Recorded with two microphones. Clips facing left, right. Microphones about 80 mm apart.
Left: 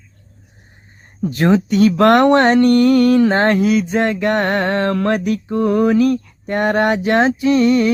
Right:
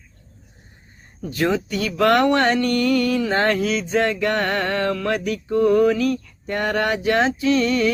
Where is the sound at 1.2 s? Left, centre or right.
Left.